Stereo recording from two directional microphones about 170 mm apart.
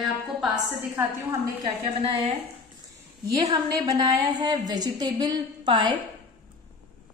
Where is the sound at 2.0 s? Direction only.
35° right (ahead or behind).